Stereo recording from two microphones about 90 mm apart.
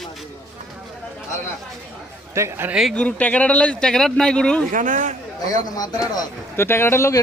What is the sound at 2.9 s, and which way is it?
Speech, 15° left (ahead or behind).